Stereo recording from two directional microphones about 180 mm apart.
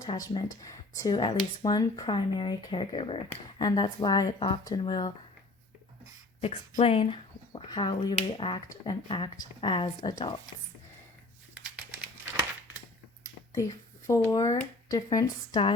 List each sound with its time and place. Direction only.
0.0 s speech: 20° left (ahead or behind)
6.7 s speech: 30° left (ahead or behind)
11.5 s crumpling: 5° right (ahead or behind)
13.2 s a sound: 20° left (ahead or behind)
14.8 s speech: 20° left (ahead or behind)